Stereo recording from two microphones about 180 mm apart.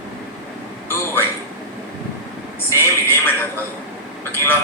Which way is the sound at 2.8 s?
10° left (ahead or behind).